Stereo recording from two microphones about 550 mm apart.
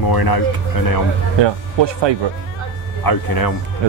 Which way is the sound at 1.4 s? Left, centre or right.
Right.